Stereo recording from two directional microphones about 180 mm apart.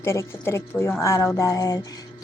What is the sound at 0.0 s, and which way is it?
Speech, 15° left (ahead or behind).